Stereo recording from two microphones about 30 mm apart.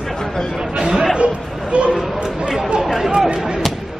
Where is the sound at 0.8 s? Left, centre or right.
Right.